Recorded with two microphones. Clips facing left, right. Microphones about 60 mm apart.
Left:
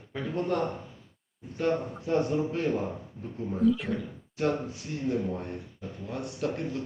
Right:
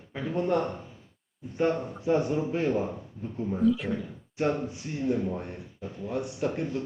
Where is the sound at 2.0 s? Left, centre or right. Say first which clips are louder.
Right 3 dB; centre.